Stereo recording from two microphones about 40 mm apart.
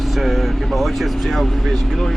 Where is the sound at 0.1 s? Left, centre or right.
Centre.